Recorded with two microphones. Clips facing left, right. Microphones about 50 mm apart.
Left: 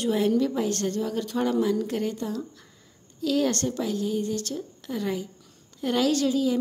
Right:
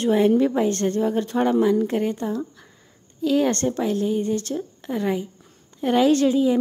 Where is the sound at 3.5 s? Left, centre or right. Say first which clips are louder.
Right 5 dB; right.